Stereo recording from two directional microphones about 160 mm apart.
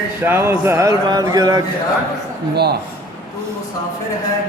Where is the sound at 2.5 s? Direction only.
90° right.